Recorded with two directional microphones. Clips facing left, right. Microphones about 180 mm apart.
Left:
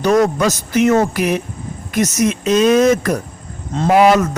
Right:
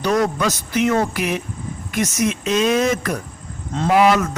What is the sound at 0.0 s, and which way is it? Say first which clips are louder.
Speech: left 5 dB; 45° left (ahead or behind).